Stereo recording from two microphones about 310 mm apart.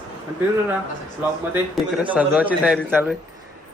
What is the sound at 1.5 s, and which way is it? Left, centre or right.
A man's voice, centre.